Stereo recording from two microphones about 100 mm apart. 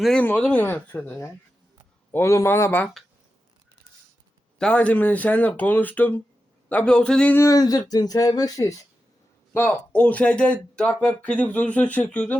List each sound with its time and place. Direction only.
0.2 s speech: 15° left (ahead or behind)
2.1 s a man's voice: 30° left (ahead or behind)
4.5 s speech: 10° left (ahead or behind)
7.3 s speech: 35° left (ahead or behind)
9.5 s speech: 20° left (ahead or behind)